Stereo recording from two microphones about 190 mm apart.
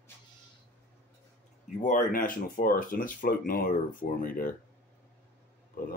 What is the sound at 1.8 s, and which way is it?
Speech, 45° left (ahead or behind).